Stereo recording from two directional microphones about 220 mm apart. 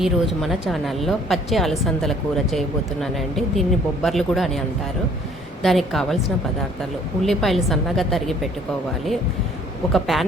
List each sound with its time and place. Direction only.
0.0 s a woman's voice: centre (ahead or behind)
5.6 s a woman's voice: centre (ahead or behind)
7.2 s a woman's voice: centre (ahead or behind)
9.9 s a woman's voice: centre (ahead or behind)